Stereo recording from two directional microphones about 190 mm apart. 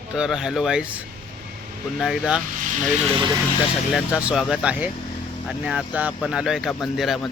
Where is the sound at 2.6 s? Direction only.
40° right (ahead or behind).